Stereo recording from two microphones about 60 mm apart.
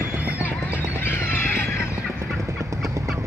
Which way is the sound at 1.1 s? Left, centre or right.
Left.